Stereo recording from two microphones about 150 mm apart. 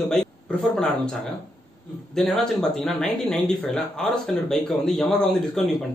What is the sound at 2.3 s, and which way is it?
Speech, centre (ahead or behind).